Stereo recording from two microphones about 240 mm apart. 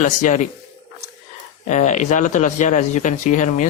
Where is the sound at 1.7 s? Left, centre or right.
Left.